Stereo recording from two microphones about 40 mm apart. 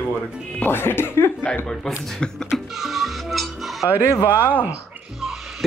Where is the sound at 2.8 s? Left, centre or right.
Centre.